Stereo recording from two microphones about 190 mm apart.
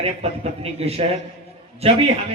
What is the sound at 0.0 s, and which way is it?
A man's voice, 30° right (ahead or behind).